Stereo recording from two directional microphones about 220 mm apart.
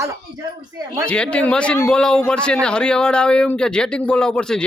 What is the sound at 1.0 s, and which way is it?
A man's voice, 5° left (ahead or behind).